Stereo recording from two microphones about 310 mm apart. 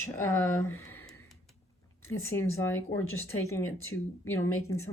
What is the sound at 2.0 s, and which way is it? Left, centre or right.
Speech, centre.